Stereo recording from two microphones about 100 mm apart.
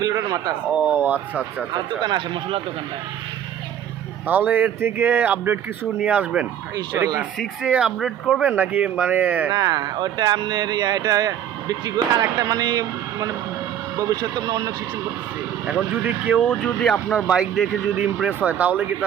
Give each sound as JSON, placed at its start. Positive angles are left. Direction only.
{"t": 0.0, "sound": "speech", "side_deg": -35}
{"t": 0.7, "sound": "speech", "side_deg": -15}
{"t": 2.0, "sound": "speech", "side_deg": -50}
{"t": 4.3, "sound": "speech", "side_deg": -15}
{"t": 6.9, "sound": "speech", "side_deg": -30}
{"t": 7.6, "sound": "speech", "side_deg": -10}
{"t": 9.5, "sound": "speech", "side_deg": -40}
{"t": 14.2, "sound": "speech", "side_deg": -45}
{"t": 15.6, "sound": "speech", "side_deg": -15}
{"t": 16.4, "sound": "speech", "side_deg": 15}
{"t": 17.2, "sound": "speech", "side_deg": -5}